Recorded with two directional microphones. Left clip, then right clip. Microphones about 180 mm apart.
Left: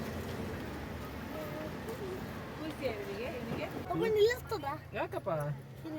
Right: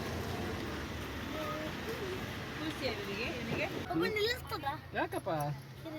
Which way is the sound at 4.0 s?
30° left (ahead or behind).